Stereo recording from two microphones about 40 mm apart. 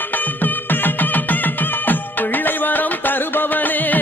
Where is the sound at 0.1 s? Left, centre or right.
Left.